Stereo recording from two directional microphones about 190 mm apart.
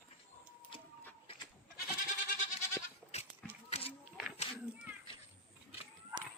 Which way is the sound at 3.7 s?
35° left (ahead or behind).